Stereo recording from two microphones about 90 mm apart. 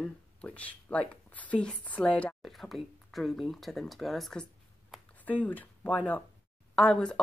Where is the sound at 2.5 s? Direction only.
Centre (ahead or behind).